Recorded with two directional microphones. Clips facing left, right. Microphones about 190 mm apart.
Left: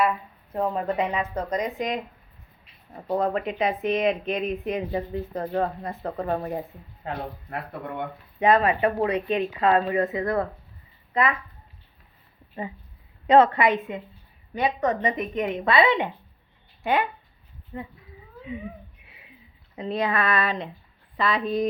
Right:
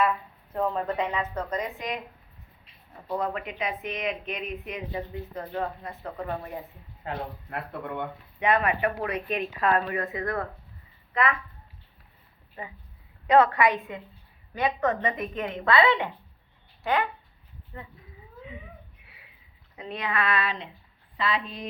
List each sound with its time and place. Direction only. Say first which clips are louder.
0.5 s speech: left 2 dB; 15° left (ahead or behind)
3.1 s speech: left 6 dB; 35° left (ahead or behind)
8.5 s speech: left 4 dB; 30° left (ahead or behind)
13.2 s speech: left 3 dB; 25° left (ahead or behind)
18.4 s a sound: left 10 dB; 20° left (ahead or behind)
19.7 s speech: left 6 dB; 35° left (ahead or behind)